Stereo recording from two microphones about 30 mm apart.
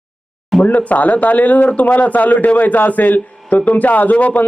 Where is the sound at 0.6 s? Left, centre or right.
Left.